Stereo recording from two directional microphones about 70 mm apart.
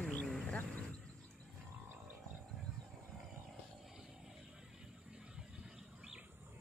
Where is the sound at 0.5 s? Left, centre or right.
Left.